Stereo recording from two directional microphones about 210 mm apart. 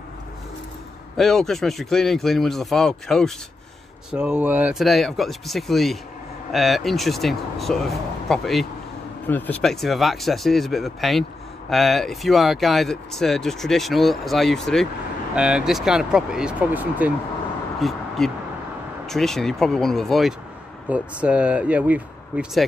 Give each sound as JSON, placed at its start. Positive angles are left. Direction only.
{"t": 1.1, "sound": "speech", "side_deg": 0}